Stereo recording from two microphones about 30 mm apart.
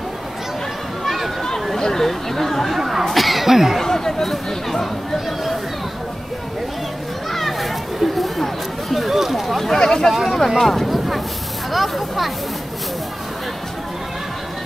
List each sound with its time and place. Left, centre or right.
1.0 s a sound: centre
1.8 s speech: centre
2.8 s speech: centre
3.1 s a sound: centre
3.4 s speech: centre
3.8 s a sound: centre
7.3 s children playing: centre
8.9 s a sound: centre
9.8 s speech: centre
10.1 s speech: centre
10.6 s vehicle: centre
11.7 s speech: centre